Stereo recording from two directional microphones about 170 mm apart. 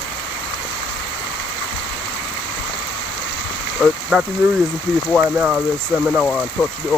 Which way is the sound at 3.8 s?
Centre (ahead or behind).